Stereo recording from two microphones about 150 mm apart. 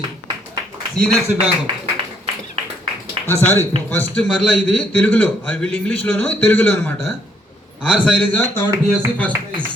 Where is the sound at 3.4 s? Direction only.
15° left (ahead or behind).